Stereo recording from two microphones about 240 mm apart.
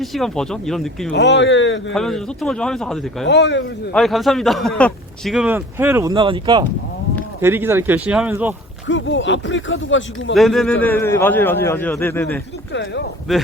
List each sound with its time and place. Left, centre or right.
0.0 s speech: centre
1.1 s speech: left
1.9 s speech: centre
3.2 s speech: left
3.9 s speech: centre
7.4 s speech: centre
8.9 s speech: left
10.3 s a man's voice: centre
12.7 s speech: left
13.3 s speech: centre